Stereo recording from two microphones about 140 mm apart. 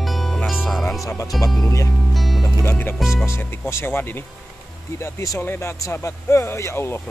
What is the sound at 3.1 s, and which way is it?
Speech, 20° left (ahead or behind).